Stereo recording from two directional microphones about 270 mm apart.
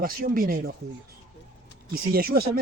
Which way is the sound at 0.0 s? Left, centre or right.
Right.